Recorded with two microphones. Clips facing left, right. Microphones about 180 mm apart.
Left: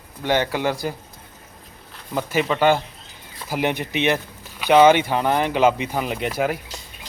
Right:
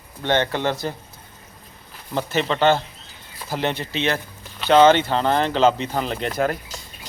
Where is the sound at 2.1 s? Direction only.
10° left (ahead or behind).